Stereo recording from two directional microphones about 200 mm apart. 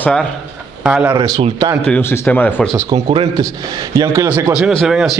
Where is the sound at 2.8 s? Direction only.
25° right (ahead or behind).